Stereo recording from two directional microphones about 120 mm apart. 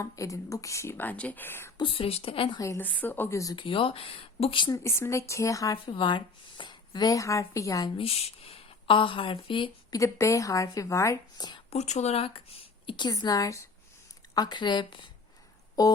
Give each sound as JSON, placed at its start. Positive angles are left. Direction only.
{"t": 0.0, "sound": "speech", "side_deg": 25}
{"t": 1.8, "sound": "a woman's voice", "side_deg": 50}
{"t": 2.6, "sound": "speech", "side_deg": 25}
{"t": 2.8, "sound": "speech", "side_deg": 15}
{"t": 3.5, "sound": "a woman's voice", "side_deg": 45}
{"t": 4.7, "sound": "speech", "side_deg": 25}
{"t": 5.7, "sound": "speech", "side_deg": 40}
{"t": 7.9, "sound": "a woman's voice", "side_deg": 55}
{"t": 9.9, "sound": "speech", "side_deg": 25}
{"t": 11.7, "sound": "a woman's voice", "side_deg": 65}